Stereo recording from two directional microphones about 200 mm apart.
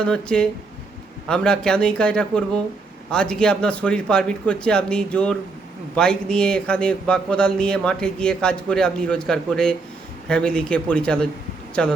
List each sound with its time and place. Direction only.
0.0 s a man's voice: 5° left (ahead or behind)